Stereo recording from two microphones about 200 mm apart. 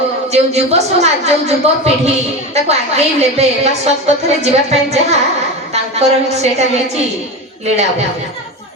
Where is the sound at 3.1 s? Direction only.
35° right (ahead or behind).